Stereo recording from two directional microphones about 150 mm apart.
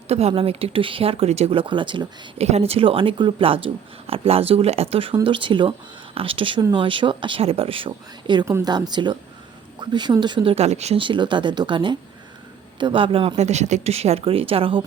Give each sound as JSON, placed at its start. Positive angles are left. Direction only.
{"t": 0.1, "sound": "speech", "side_deg": -45}
{"t": 2.5, "sound": "speech", "side_deg": -45}
{"t": 8.4, "sound": "speech", "side_deg": -15}
{"t": 8.7, "sound": "speech", "side_deg": -30}